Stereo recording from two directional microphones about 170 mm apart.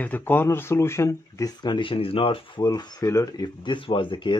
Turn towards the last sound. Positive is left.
turn(degrees=30)  # may be behind; listen again after turning